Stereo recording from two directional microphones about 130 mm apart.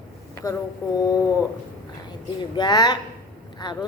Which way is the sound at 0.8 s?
25° left (ahead or behind).